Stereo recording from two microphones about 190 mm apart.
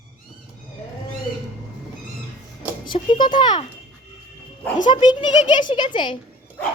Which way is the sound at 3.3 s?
25° left (ahead or behind).